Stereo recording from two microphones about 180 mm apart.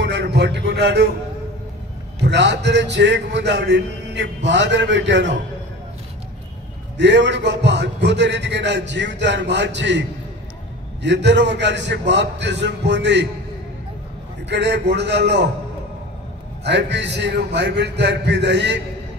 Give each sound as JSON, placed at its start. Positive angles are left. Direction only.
{"t": 0.0, "sound": "a sound", "side_deg": -70}
{"t": 2.2, "sound": "a man's voice", "side_deg": -75}
{"t": 7.0, "sound": "a man's voice", "side_deg": -75}
{"t": 14.5, "sound": "a man's voice", "side_deg": -70}
{"t": 16.6, "sound": "a man's voice", "side_deg": -70}